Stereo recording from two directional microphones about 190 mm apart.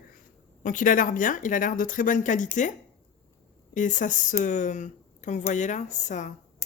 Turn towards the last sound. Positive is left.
turn(degrees=40)  # may be behind; listen again after turning